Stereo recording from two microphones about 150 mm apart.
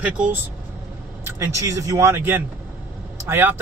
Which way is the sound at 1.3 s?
20° right (ahead or behind).